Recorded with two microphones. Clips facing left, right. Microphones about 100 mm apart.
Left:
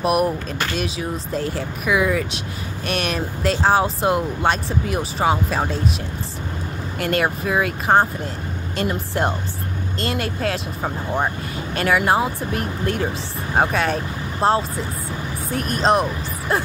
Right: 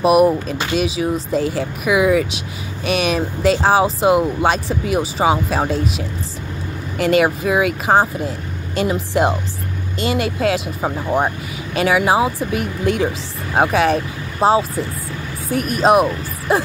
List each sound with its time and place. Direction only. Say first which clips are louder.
0.0 s speech: right 6 dB; 5° right (ahead or behind)
7.0 s speech: right 6 dB; centre (ahead or behind)